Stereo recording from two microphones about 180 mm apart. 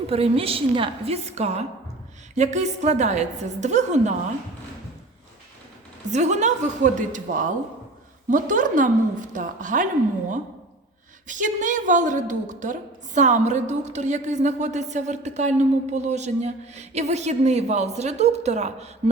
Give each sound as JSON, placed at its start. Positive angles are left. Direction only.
{"t": 0.1, "sound": "a woman's voice", "side_deg": -30}
{"t": 6.1, "sound": "a woman's voice", "side_deg": -40}
{"t": 11.3, "sound": "a woman's voice", "side_deg": -45}